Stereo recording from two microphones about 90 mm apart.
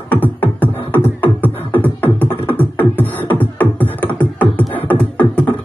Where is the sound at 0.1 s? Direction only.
20° left (ahead or behind).